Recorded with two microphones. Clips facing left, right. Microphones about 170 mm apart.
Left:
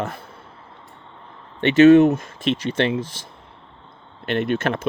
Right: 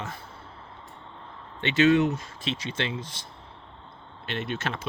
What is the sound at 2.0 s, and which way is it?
Speech, 55° left (ahead or behind).